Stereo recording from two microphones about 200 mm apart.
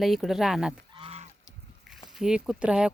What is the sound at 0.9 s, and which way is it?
Goose, 30° right (ahead or behind).